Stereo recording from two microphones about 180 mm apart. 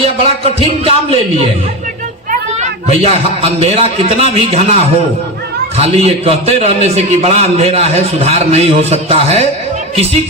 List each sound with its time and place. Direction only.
0.0 s a man's voice: 35° right (ahead or behind)